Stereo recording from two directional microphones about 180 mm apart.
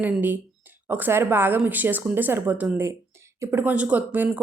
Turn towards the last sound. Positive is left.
turn(degrees=-10)  # may be behind; listen again after turning